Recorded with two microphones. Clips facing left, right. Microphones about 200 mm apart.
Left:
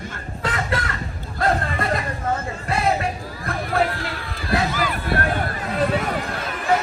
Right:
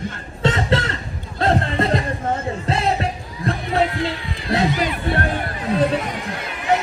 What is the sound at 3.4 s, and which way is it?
Crowd, 20° right (ahead or behind).